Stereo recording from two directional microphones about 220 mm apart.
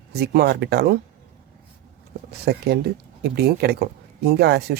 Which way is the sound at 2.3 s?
45° right (ahead or behind).